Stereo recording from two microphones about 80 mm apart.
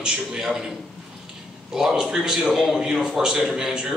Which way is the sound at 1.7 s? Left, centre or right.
Centre.